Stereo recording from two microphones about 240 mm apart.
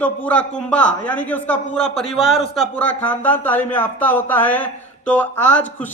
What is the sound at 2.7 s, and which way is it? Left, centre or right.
Speech, centre.